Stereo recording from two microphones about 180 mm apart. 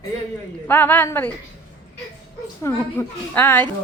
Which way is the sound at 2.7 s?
10° left (ahead or behind).